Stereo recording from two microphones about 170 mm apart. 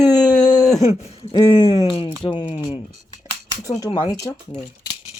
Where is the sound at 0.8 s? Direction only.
35° left (ahead or behind).